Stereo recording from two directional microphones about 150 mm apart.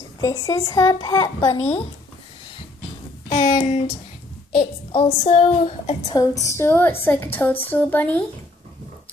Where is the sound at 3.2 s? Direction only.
40° left (ahead or behind).